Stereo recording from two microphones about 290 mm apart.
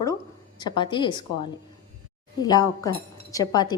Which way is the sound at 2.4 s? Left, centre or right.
Centre.